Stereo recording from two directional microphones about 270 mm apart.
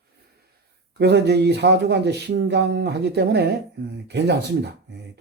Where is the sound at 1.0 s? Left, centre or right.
Right.